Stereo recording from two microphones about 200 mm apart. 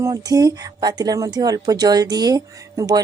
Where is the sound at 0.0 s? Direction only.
20° right (ahead or behind).